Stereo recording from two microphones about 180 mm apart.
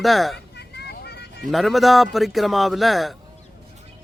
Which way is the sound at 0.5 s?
65° left (ahead or behind).